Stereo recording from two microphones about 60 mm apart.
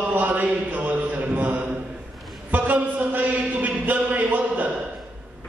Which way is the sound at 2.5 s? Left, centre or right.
Right.